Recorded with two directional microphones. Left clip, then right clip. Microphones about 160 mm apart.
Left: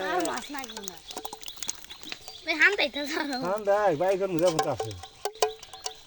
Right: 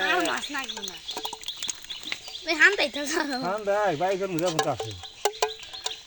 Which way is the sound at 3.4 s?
35° left (ahead or behind).